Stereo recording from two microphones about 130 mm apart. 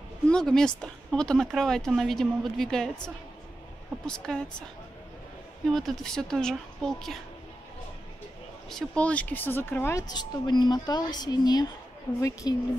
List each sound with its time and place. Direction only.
0.3 s speech: 5° left (ahead or behind)
4.0 s speech: 5° left (ahead or behind)
5.7 s speech: centre (ahead or behind)
8.6 s speech: 5° left (ahead or behind)
10.0 s a woman's voice: 35° left (ahead or behind)